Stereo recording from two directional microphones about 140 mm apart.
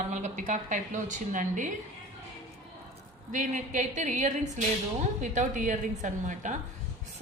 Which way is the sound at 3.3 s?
65° right (ahead or behind).